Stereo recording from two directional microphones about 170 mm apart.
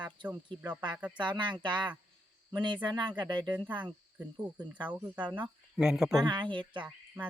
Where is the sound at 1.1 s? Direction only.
25° right (ahead or behind).